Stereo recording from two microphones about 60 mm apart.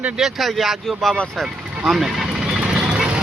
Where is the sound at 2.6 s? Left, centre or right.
Centre.